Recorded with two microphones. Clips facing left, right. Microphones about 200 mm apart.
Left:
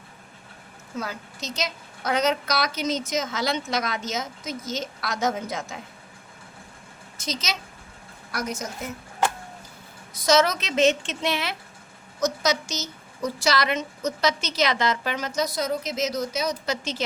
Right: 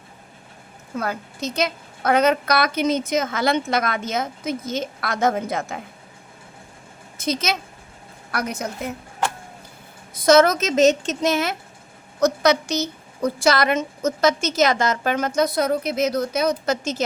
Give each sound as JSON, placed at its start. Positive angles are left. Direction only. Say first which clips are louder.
{"t": 0.9, "sound": "a woman's voice", "louder": "right 6 dB", "side_deg": -55}
{"t": 7.2, "sound": "a woman's voice", "louder": "right 7 dB", "side_deg": -55}
{"t": 10.2, "sound": "a woman's voice", "louder": "right 6 dB", "side_deg": -55}
{"t": 12.2, "sound": "a woman's voice", "louder": "right 6 dB", "side_deg": -60}